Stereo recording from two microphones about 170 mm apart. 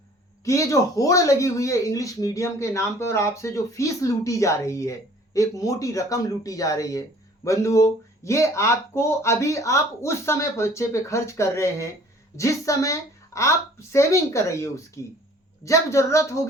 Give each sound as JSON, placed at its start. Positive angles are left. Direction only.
{"t": 0.4, "sound": "speech", "side_deg": 20}